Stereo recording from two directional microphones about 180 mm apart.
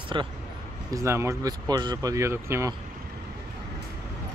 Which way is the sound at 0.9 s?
15° right (ahead or behind).